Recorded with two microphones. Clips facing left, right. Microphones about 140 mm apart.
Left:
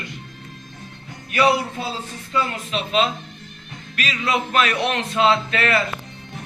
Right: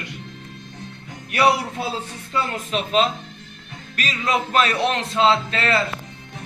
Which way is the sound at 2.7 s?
40° right (ahead or behind).